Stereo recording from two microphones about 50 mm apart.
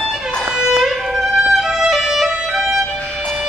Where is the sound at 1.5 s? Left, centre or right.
Centre.